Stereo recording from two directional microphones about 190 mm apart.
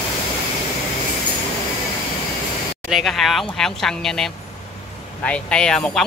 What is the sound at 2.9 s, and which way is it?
Speech, centre (ahead or behind).